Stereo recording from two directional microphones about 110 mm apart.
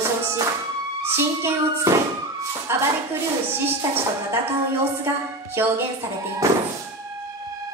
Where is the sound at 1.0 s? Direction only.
20° right (ahead or behind).